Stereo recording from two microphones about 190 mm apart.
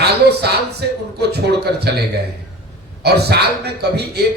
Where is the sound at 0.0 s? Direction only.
60° right (ahead or behind).